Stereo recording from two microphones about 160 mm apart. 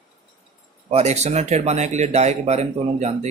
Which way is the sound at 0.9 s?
40° right (ahead or behind).